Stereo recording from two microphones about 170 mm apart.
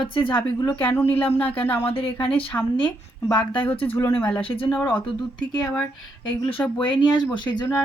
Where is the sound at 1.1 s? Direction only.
10° left (ahead or behind).